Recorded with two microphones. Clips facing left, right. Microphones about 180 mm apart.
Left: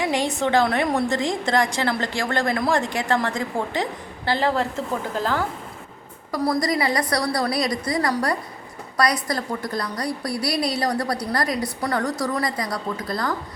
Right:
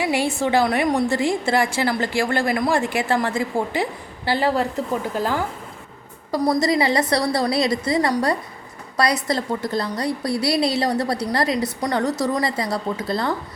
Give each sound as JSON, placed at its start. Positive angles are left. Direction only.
{"t": 0.0, "sound": "a woman's voice", "side_deg": -10}
{"t": 6.4, "sound": "a woman's voice", "side_deg": -15}
{"t": 6.7, "sound": "a woman's voice", "side_deg": -25}